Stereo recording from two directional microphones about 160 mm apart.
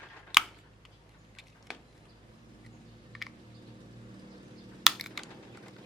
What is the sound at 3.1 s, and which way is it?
Typing, centre (ahead or behind).